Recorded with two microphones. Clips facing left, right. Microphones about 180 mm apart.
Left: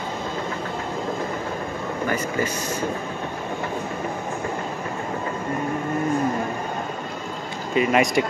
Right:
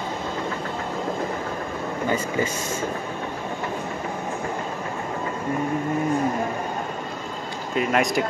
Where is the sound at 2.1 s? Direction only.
25° right (ahead or behind).